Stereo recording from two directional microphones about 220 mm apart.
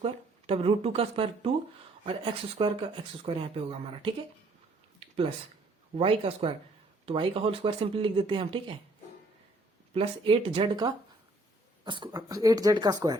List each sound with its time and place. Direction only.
0.0 s speech: 25° right (ahead or behind)
4.9 s a sound: 25° right (ahead or behind)
6.0 s speech: 25° right (ahead or behind)
9.9 s speech: 25° right (ahead or behind)